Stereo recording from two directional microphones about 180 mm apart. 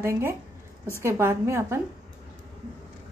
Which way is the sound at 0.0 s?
15° right (ahead or behind).